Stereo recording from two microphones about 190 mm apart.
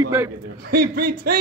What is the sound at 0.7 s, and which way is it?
Speech, 55° right (ahead or behind).